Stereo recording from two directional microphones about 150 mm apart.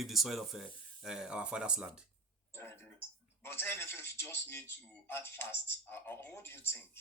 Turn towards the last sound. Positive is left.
turn(degrees=15)  # may be behind; listen again after turning